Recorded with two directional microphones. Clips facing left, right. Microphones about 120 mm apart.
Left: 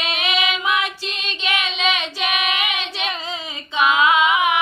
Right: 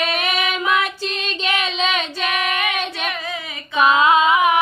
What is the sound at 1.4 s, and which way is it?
Child singing, 40° right (ahead or behind).